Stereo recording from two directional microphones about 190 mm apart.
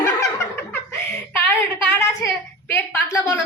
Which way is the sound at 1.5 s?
15° left (ahead or behind).